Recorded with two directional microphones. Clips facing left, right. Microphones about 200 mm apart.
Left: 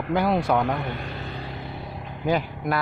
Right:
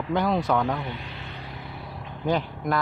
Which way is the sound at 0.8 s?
55° left (ahead or behind).